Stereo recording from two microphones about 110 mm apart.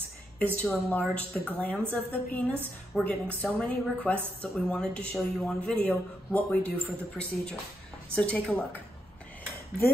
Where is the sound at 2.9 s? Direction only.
5° right (ahead or behind).